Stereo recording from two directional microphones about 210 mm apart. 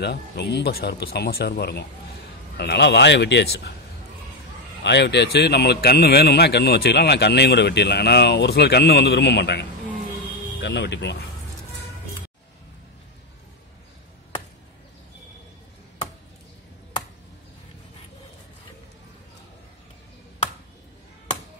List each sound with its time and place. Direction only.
0.0 s a man's voice: 50° left (ahead or behind)
4.8 s a man's voice: 55° left (ahead or behind)